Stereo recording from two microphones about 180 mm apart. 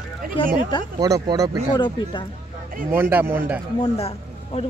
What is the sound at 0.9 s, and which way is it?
Speech, 20° right (ahead or behind).